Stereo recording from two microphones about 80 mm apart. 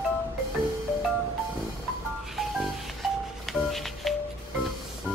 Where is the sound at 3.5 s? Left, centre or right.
Centre.